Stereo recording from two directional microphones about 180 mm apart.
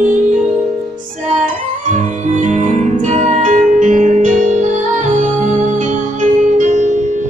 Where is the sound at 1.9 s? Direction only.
40° right (ahead or behind).